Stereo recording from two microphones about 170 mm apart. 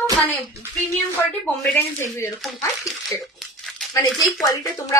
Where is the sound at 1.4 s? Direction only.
10° left (ahead or behind).